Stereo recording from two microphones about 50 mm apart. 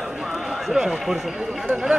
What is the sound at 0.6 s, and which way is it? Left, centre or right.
Speech, centre.